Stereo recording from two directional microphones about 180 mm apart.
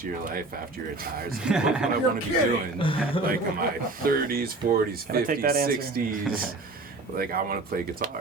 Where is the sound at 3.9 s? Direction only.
55° right (ahead or behind).